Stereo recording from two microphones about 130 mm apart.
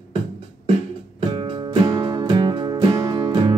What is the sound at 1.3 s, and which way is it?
Music, 40° right (ahead or behind).